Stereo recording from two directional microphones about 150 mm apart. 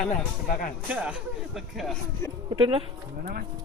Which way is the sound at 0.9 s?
10° right (ahead or behind).